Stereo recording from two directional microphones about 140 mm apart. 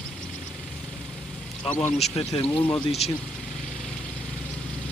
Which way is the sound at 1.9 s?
50° left (ahead or behind).